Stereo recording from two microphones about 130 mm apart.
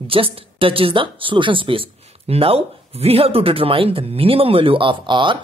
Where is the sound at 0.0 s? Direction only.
45° right (ahead or behind).